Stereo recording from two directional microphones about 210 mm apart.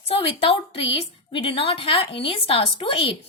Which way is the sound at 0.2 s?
25° left (ahead or behind).